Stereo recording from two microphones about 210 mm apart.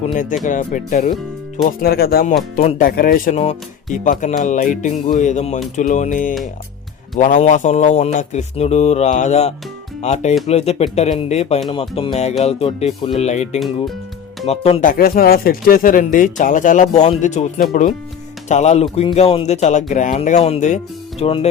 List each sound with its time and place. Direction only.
0.1 s speech: 40° left (ahead or behind)
2.6 s speech: 30° left (ahead or behind)
2.8 s speech: 45° left (ahead or behind); by 21.4 s 25° left (ahead or behind)